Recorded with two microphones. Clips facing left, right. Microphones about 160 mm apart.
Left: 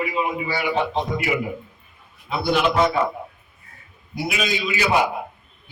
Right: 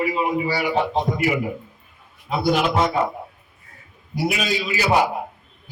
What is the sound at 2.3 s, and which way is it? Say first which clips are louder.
Speech: right 2 dB; 40° right (ahead or behind).